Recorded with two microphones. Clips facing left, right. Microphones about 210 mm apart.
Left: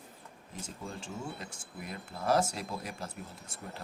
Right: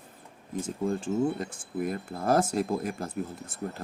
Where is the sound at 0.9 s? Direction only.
50° right (ahead or behind).